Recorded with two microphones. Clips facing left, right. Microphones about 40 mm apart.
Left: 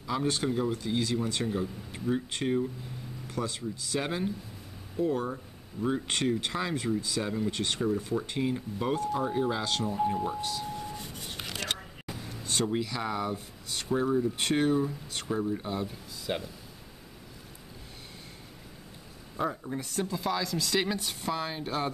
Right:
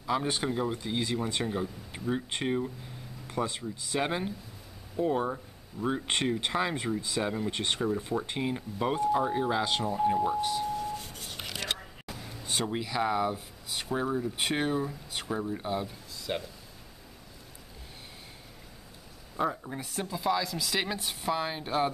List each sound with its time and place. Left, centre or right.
0.0 s speech: centre
10.8 s a sound: centre
11.4 s a sound: centre
12.4 s speech: centre
16.3 s speech: centre
19.3 s speech: centre